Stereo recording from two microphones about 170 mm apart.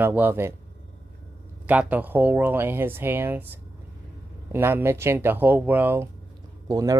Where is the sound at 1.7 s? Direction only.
10° right (ahead or behind).